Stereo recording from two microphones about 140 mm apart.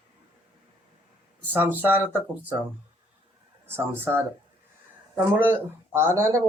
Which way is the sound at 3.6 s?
15° right (ahead or behind).